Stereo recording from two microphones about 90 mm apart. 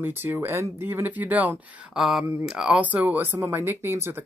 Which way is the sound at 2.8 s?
20° right (ahead or behind).